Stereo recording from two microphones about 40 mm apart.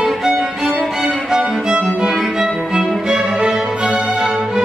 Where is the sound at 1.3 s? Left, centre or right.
Centre.